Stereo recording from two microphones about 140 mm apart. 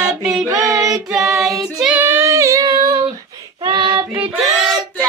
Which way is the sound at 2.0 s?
15° right (ahead or behind).